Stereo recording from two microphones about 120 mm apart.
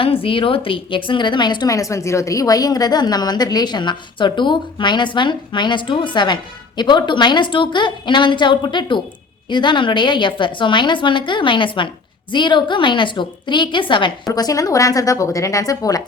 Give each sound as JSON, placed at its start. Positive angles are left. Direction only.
{"t": 0.0, "sound": "a woman's voice", "side_deg": 50}
{"t": 14.3, "sound": "a woman's voice", "side_deg": 30}